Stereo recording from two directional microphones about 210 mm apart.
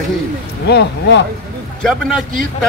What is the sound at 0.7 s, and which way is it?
Speech, 55° left (ahead or behind).